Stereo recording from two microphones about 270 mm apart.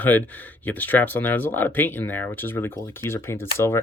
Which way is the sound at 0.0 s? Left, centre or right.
Centre.